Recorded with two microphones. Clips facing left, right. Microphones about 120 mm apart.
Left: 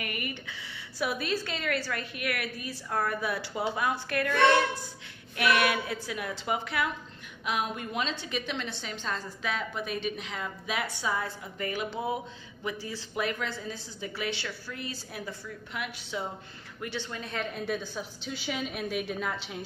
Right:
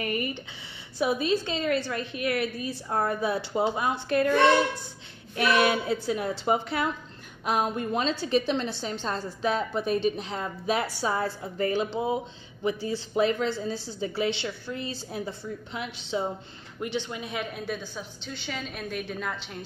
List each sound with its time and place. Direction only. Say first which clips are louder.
0.0 s a woman's voice: right 7 dB; 30° right (ahead or behind); by 19.6 s centre (ahead or behind)